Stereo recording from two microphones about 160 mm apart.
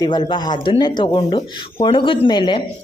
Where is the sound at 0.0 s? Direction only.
25° left (ahead or behind).